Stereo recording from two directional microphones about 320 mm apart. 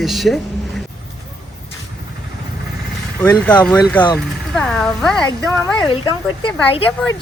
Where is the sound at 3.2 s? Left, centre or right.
Centre.